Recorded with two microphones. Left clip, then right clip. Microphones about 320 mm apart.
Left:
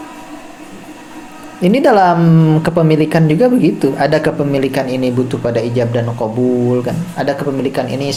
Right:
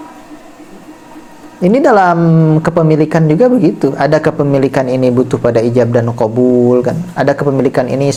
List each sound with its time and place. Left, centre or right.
1.6 s a woman's voice: right